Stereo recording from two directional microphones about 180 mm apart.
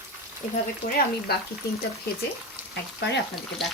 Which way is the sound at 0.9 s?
55° left (ahead or behind).